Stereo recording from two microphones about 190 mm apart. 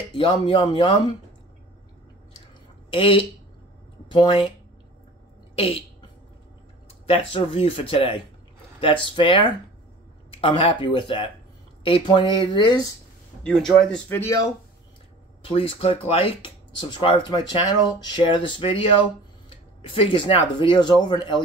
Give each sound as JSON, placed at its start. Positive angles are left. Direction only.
{"t": 0.1, "sound": "speech", "side_deg": 25}
{"t": 2.9, "sound": "speech", "side_deg": 25}
{"t": 5.6, "sound": "speech", "side_deg": 30}
{"t": 7.1, "sound": "speech", "side_deg": 30}
{"t": 13.4, "sound": "speech", "side_deg": 5}
{"t": 15.4, "sound": "speech", "side_deg": 30}